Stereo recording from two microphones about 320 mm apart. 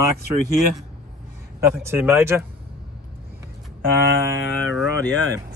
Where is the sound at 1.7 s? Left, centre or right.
Centre.